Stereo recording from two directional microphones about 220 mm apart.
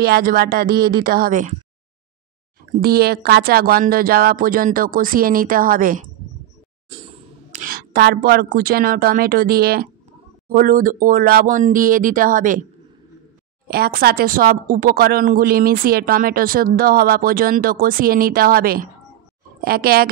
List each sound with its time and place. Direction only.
0.0 s speech: 45° right (ahead or behind)
2.8 s a woman's voice: 45° right (ahead or behind)
6.9 s a sound: 25° right (ahead or behind)
7.6 s a woman's voice: 45° right (ahead or behind)
13.7 s a woman's voice: 45° right (ahead or behind)